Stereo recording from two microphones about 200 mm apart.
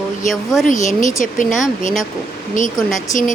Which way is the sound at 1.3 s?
40° left (ahead or behind).